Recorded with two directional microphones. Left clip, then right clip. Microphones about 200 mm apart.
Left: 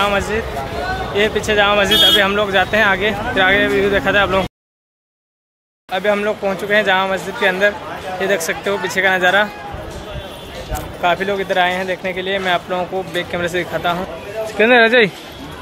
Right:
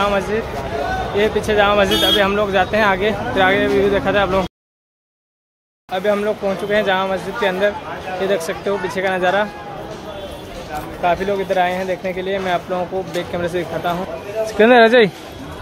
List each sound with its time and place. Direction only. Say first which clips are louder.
1.1 s speech: left 1 dB; centre (ahead or behind)
5.9 s speech: left 1 dB; centre (ahead or behind)
11.0 s speech: left 1 dB; centre (ahead or behind)
14.6 s speech: right 1 dB; 15° right (ahead or behind)